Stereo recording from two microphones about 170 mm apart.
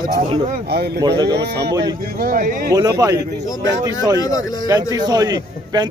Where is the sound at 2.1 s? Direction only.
60° right (ahead or behind).